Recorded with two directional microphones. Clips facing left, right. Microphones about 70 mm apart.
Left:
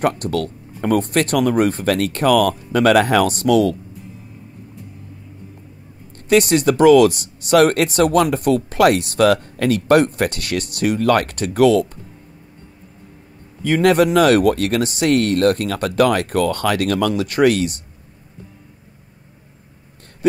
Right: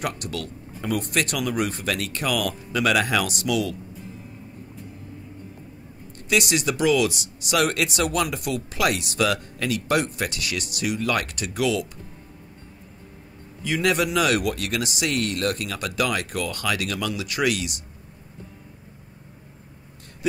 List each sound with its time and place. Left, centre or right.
0.0 s speech: left
6.2 s speech: left
13.6 s speech: left